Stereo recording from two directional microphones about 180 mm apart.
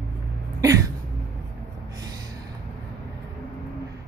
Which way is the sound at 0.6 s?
20° right (ahead or behind).